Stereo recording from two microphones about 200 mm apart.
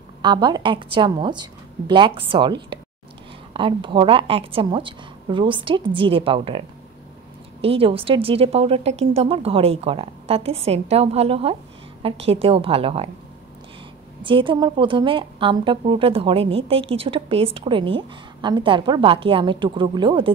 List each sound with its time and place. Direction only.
0.2 s a woman's voice: 20° right (ahead or behind)
7.6 s a woman's voice: 30° right (ahead or behind)
14.2 s a woman's voice: 25° right (ahead or behind)